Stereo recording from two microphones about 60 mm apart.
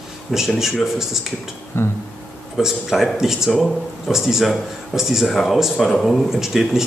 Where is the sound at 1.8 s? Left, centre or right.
Left.